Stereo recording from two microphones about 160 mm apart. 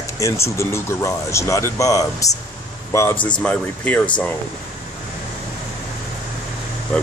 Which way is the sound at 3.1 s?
30° left (ahead or behind).